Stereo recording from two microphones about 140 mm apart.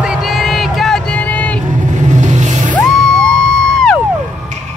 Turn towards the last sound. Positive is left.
turn(degrees=5)  # may be behind; listen again after turning